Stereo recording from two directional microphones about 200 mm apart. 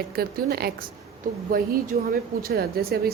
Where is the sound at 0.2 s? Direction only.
50° right (ahead or behind).